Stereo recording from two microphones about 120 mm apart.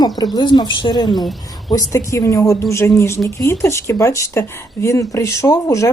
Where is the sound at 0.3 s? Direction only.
35° left (ahead or behind).